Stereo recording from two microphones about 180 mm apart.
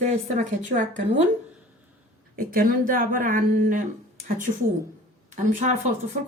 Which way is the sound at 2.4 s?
50° right (ahead or behind).